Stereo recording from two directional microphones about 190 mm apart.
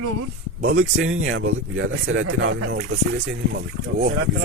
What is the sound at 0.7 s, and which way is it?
Speech, 90° right.